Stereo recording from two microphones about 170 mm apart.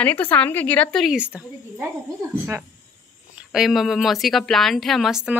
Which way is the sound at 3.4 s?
5° right (ahead or behind).